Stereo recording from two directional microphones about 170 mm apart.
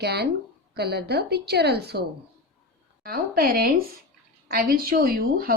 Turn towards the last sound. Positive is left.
turn(degrees=-60)  # may be behind; listen again after turning